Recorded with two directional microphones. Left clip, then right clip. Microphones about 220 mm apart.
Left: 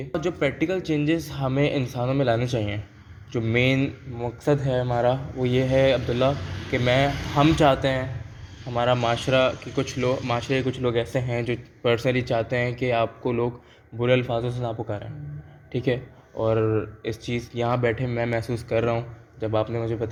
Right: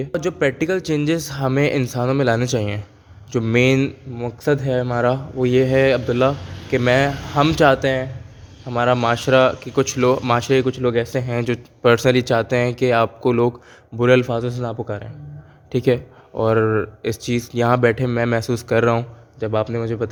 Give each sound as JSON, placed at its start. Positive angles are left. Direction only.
{"t": 0.0, "sound": "speech", "side_deg": -45}